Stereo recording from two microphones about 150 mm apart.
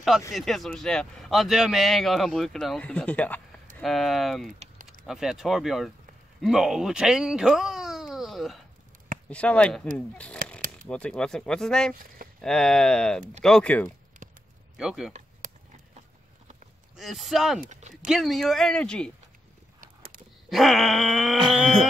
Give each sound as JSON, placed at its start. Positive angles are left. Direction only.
{"t": 0.3, "sound": "speech", "side_deg": 0}
{"t": 14.2, "sound": "a sound", "side_deg": -60}
{"t": 14.8, "sound": "speech", "side_deg": -5}
{"t": 16.9, "sound": "speech", "side_deg": 0}
{"t": 19.8, "sound": "a sound", "side_deg": -70}
{"t": 20.4, "sound": "speech", "side_deg": 0}